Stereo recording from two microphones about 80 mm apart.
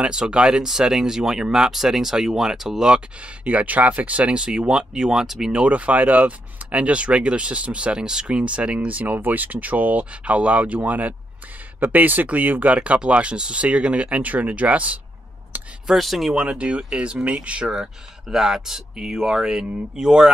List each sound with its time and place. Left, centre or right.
0.0 s speech: centre
15.5 s a sound: right
15.9 s speech: centre